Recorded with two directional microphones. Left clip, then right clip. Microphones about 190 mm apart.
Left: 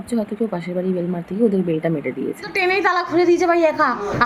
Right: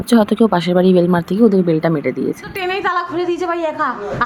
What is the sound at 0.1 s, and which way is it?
Speech, 45° right (ahead or behind).